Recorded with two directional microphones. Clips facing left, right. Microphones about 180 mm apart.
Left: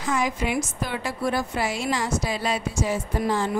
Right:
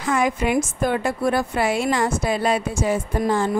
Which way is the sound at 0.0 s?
55° right (ahead or behind).